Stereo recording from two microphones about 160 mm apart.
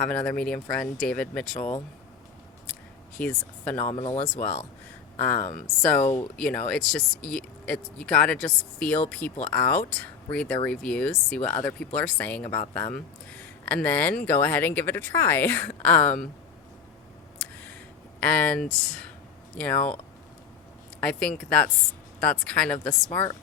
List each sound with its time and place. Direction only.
0.0 s speech: 5° left (ahead or behind)
3.2 s speech: 10° left (ahead or behind)
3.8 s speech: 45° left (ahead or behind)
5.1 s speech: 10° left (ahead or behind)
17.3 s a sound: 10° left (ahead or behind)
18.2 s speech: 10° left (ahead or behind)
21.0 s speech: 5° left (ahead or behind)